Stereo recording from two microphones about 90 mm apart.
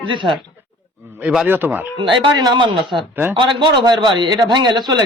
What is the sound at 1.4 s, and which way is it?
Speech, 20° right (ahead or behind).